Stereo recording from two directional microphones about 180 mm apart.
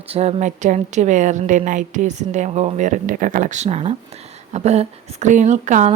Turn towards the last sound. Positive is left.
turn(degrees=-40)  # may be behind; listen again after turning